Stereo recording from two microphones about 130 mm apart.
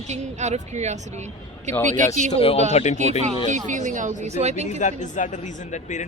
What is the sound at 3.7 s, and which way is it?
Speech, 70° right (ahead or behind).